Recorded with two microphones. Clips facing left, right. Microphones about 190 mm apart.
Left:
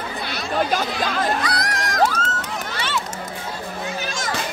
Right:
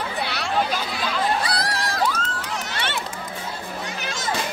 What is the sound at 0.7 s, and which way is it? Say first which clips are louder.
Chatter: left 4 dB; 45° left (ahead or behind).